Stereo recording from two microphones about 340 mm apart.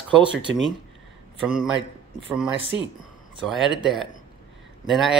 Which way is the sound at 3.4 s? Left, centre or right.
Centre.